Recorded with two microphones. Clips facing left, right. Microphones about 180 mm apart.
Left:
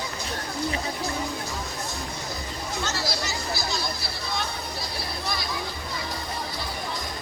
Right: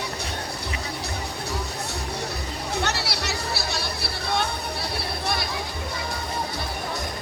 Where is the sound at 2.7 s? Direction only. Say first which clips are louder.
Right 2 dB; 65° right (ahead or behind).